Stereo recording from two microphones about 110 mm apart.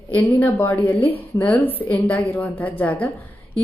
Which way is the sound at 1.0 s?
55° left (ahead or behind).